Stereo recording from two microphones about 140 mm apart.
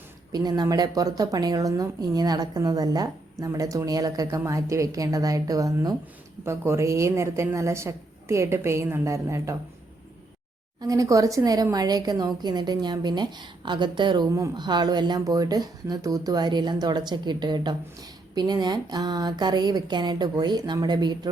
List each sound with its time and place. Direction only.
0.3 s speech: 30° right (ahead or behind)
10.8 s speech: 25° right (ahead or behind)